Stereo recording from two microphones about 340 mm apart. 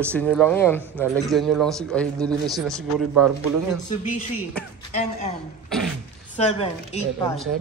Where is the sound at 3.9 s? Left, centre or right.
Left.